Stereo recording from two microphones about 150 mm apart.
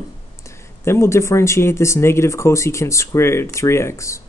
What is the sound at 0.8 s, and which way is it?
Speech, 15° left (ahead or behind).